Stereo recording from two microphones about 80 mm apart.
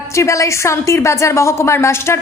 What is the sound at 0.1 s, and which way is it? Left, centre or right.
A woman's voice, left.